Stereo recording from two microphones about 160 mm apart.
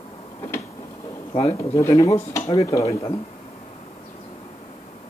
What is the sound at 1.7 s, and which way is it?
Speech, 20° left (ahead or behind).